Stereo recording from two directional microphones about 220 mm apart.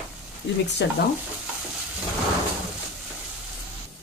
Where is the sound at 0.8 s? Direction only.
50° left (ahead or behind).